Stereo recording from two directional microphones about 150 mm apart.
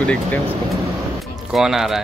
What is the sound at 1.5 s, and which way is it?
Speech, centre (ahead or behind).